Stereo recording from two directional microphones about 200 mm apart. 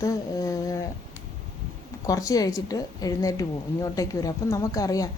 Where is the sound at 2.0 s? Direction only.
15° left (ahead or behind).